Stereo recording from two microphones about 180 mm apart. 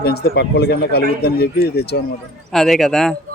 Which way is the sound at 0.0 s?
60° left (ahead or behind).